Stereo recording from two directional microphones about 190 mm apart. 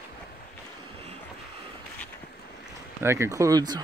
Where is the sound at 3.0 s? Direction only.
15° right (ahead or behind).